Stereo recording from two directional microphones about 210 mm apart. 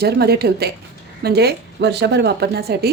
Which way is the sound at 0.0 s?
50° right (ahead or behind).